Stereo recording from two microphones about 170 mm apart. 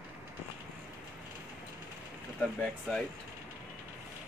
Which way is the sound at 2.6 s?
5° left (ahead or behind).